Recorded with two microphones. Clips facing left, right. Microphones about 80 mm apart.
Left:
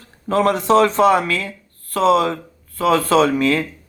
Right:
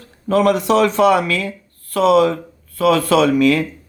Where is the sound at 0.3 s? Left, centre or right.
Left.